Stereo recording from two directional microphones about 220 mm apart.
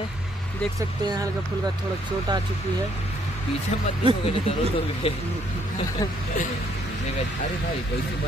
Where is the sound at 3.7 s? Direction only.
30° left (ahead or behind).